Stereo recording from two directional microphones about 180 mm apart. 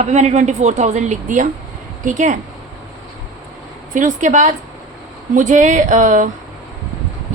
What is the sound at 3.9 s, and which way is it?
Speech, 45° right (ahead or behind).